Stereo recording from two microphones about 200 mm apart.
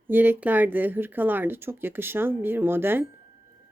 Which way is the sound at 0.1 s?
10° right (ahead or behind).